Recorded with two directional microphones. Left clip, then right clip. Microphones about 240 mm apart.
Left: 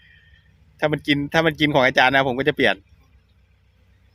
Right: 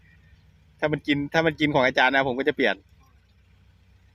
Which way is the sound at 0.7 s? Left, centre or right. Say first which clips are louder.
Left 4 dB; left.